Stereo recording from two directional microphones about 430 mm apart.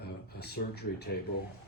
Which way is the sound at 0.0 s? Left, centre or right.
Left.